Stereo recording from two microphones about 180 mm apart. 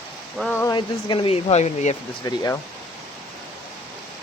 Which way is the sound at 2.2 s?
20° left (ahead or behind).